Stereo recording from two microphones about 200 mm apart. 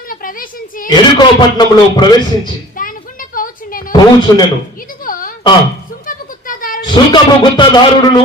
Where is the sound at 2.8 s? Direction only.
45° left (ahead or behind).